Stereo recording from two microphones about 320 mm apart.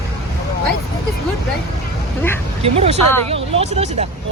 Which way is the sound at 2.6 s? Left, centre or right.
Centre.